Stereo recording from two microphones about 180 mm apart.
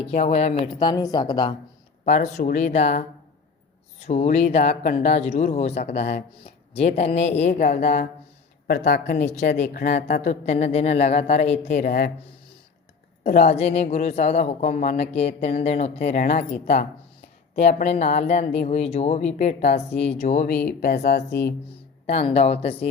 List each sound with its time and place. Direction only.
0.0 s speech: 35° left (ahead or behind)
2.0 s speech: 40° left (ahead or behind)
4.0 s speech: 40° left (ahead or behind)
8.6 s a woman's voice: 60° left (ahead or behind)
9.1 s speech: 40° left (ahead or behind)
10.2 s speech: 40° left (ahead or behind)
13.4 s speech: 35° left (ahead or behind)
20.5 s a woman's voice: 60° left (ahead or behind)
22.0 s speech: 35° left (ahead or behind)